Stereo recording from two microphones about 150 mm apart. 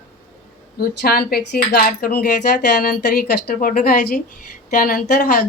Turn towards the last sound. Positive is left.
turn(degrees=75)  # may be behind; listen again after turning